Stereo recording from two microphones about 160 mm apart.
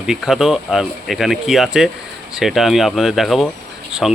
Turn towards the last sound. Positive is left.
turn(degrees=0)  # may be behind; listen again after turning